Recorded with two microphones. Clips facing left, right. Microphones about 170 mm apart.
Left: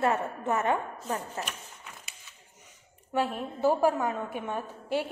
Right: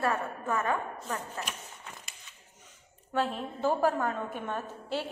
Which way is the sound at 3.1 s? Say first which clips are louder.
Left 1 dB; 10° left (ahead or behind).